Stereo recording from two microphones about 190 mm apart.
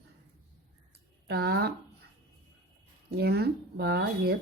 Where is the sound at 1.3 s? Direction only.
60° right (ahead or behind).